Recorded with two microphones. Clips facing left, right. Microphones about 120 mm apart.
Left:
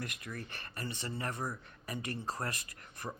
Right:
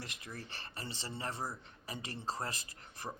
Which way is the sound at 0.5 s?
30° right (ahead or behind).